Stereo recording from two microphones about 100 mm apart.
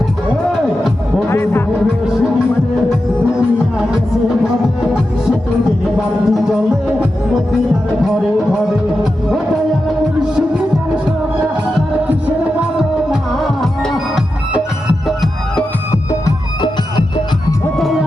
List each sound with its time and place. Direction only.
1.3 s music: 25° left (ahead or behind)
3.3 s music: 10° right (ahead or behind)
6.2 s music: centre (ahead or behind)
10.3 s music: 10° right (ahead or behind)
13.1 s music: centre (ahead or behind)
17.7 s music: centre (ahead or behind)